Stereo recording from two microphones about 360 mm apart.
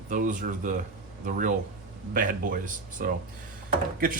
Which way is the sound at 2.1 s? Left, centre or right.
Right.